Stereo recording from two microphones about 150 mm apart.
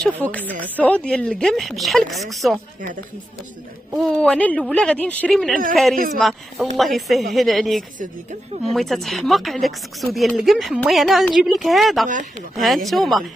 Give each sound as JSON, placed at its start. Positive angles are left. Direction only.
{"t": 0.2, "sound": "speech", "side_deg": 10}
{"t": 3.9, "sound": "speech", "side_deg": 0}
{"t": 8.0, "sound": "a woman's voice", "side_deg": -50}
{"t": 8.7, "sound": "speech", "side_deg": 0}
{"t": 12.1, "sound": "speech", "side_deg": -60}
{"t": 12.5, "sound": "speech", "side_deg": 0}